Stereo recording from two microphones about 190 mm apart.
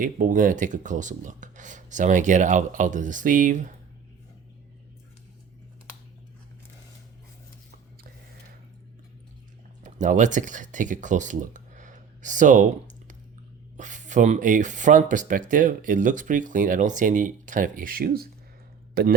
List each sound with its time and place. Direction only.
0.0 s speech: 45° right (ahead or behind)
9.8 s speech: 40° right (ahead or behind)
13.7 s speech: 40° right (ahead or behind)